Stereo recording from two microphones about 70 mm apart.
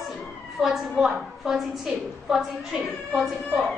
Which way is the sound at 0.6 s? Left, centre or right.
Centre.